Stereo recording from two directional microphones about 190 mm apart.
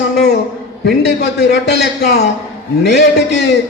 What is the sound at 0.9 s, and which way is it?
A man's voice, 65° left (ahead or behind).